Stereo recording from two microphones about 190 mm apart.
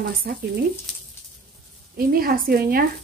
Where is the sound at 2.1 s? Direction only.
50° right (ahead or behind).